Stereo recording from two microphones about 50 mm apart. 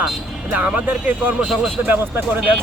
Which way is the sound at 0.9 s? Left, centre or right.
Right.